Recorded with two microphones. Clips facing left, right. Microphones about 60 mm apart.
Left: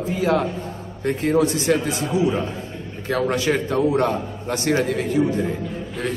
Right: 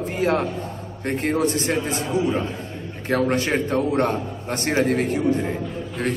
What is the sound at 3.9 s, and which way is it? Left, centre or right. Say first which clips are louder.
A man's voice: left 1 dB; right.